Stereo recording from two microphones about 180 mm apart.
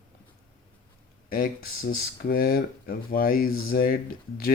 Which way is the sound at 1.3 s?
55° left (ahead or behind).